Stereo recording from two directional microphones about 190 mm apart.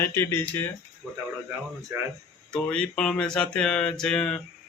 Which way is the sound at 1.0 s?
10° right (ahead or behind).